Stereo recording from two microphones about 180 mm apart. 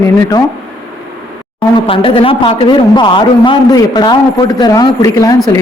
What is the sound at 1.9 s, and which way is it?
A man's voice, 30° left (ahead or behind).